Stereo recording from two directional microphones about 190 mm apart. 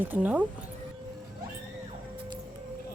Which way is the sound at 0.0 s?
10° right (ahead or behind).